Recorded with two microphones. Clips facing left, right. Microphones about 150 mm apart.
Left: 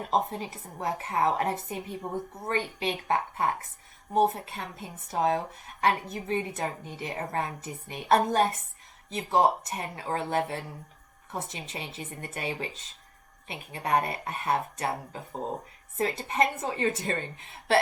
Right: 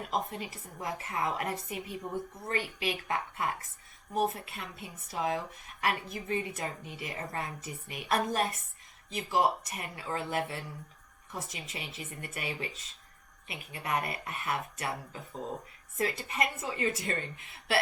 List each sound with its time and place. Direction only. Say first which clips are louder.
0.0 s speech: left 6 dB; 30° left (ahead or behind)